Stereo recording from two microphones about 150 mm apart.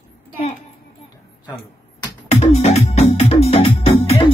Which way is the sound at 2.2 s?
45° left (ahead or behind).